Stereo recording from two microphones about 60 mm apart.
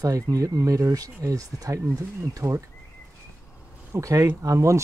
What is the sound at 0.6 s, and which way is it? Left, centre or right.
Speech, right.